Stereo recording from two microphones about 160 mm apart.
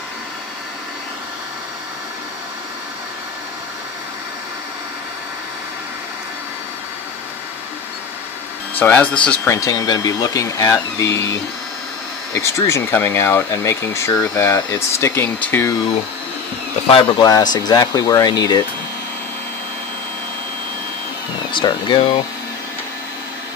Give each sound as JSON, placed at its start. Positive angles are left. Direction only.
{"t": 8.7, "sound": "speech", "side_deg": 10}
{"t": 9.5, "sound": "speech", "side_deg": 20}
{"t": 16.9, "sound": "speech", "side_deg": 25}
{"t": 21.5, "sound": "speech", "side_deg": 30}